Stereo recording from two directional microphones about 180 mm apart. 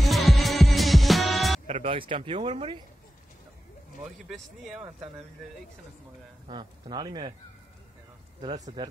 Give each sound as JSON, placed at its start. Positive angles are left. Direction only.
{"t": 0.0, "sound": "music", "side_deg": 0}
{"t": 1.7, "sound": "speech", "side_deg": -35}
{"t": 4.3, "sound": "speech", "side_deg": 0}
{"t": 6.4, "sound": "speech", "side_deg": -25}